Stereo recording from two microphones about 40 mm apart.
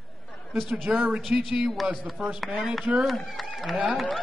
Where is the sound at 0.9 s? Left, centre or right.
Right.